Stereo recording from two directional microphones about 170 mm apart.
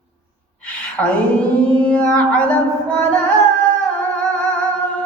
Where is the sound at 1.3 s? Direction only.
5° left (ahead or behind).